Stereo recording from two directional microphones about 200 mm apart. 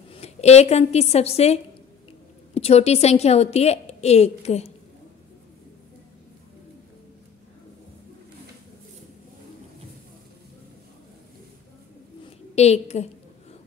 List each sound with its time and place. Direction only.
0.1 s a woman's voice: 30° left (ahead or behind)
12.5 s a woman's voice: 35° left (ahead or behind)